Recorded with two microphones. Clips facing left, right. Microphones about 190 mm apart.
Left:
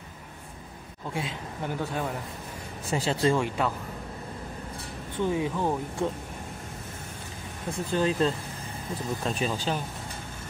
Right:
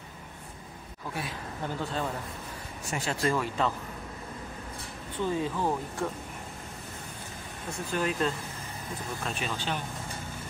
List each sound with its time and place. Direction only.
1.1 s speech: 20° left (ahead or behind)
2.9 s speech: 30° left (ahead or behind)
5.2 s speech: 15° left (ahead or behind)
7.9 s speech: 30° left (ahead or behind)